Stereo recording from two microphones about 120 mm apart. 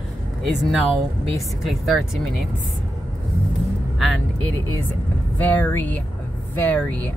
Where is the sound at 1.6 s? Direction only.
Centre (ahead or behind).